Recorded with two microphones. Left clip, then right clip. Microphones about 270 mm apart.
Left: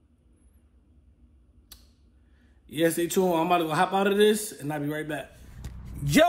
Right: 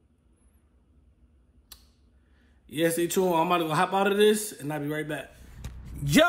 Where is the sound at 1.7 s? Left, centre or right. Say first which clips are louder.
Right 1 dB; centre.